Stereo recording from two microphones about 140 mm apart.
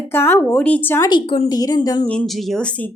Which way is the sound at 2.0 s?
10° left (ahead or behind).